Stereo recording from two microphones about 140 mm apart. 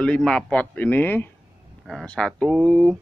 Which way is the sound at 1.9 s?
Centre (ahead or behind).